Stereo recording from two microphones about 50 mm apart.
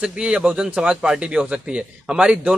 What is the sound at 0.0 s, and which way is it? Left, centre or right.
A man's voice, centre.